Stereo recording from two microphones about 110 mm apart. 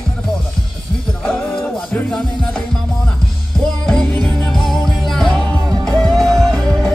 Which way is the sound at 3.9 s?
5° left (ahead or behind).